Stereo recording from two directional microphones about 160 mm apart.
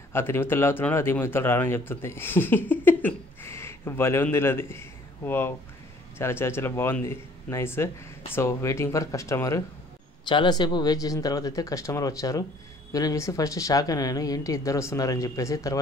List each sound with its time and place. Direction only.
0.1 s speech: 15° left (ahead or behind)
10.2 s speech: 30° left (ahead or behind)